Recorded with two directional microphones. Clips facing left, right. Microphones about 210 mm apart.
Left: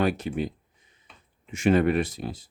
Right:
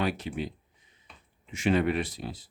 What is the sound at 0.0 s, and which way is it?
Speech, 45° left (ahead or behind).